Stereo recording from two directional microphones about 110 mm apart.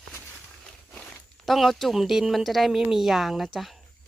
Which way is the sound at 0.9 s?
10° left (ahead or behind).